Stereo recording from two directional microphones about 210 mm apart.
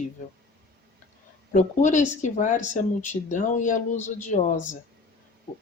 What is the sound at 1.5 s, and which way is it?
Speech, 35° left (ahead or behind).